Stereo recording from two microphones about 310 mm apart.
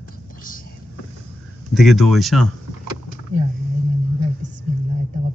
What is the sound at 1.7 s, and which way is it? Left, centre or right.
Speech, centre.